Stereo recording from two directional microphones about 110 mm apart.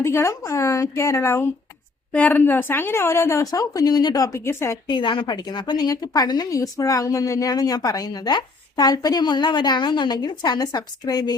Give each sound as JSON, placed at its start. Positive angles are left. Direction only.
{"t": 0.0, "sound": "a woman's voice", "side_deg": 25}
{"t": 4.9, "sound": "a woman's voice", "side_deg": 45}